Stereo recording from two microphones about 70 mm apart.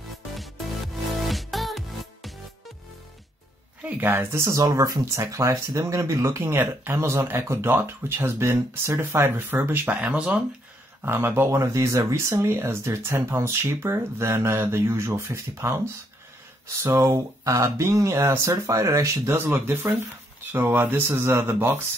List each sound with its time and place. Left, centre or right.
0.9 s music: centre
3.8 s speech: right
9.4 s speech: right
9.9 s speech: centre
11.0 s speech: right
19.3 s speech: right